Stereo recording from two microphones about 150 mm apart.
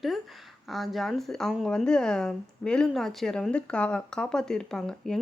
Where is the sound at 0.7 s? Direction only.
Centre (ahead or behind).